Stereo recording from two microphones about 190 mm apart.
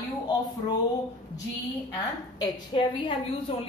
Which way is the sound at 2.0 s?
20° left (ahead or behind).